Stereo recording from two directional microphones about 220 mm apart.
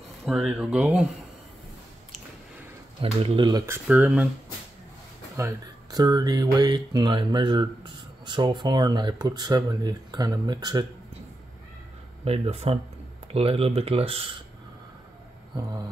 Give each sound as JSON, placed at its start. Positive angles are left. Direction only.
{"t": 0.2, "sound": "speech", "side_deg": 0}
{"t": 3.0, "sound": "speech", "side_deg": -25}
{"t": 5.4, "sound": "speech", "side_deg": -15}
{"t": 12.3, "sound": "speech", "side_deg": -25}